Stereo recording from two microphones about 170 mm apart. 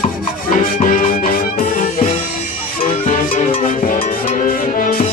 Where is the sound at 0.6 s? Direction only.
55° left (ahead or behind).